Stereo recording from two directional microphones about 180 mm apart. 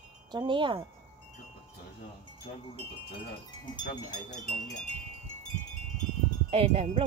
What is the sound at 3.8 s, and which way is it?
Speech, 45° left (ahead or behind).